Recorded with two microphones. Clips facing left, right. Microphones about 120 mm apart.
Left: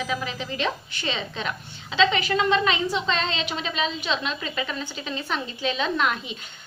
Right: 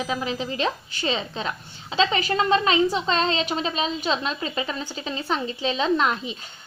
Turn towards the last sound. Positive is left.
turn(degrees=-30)  # may be behind; listen again after turning